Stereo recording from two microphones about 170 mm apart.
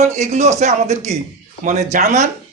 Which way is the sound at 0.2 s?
40° right (ahead or behind).